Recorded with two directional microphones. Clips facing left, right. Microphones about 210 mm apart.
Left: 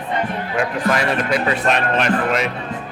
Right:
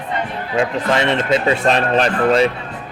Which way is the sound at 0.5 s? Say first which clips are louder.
Right 3 dB; 25° right (ahead or behind).